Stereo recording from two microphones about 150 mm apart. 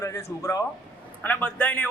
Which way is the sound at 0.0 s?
20° left (ahead or behind).